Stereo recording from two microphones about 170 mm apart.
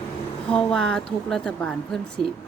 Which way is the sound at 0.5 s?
5° left (ahead or behind).